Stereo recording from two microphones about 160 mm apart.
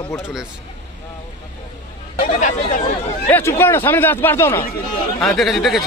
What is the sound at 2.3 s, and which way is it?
Speech, 50° left (ahead or behind).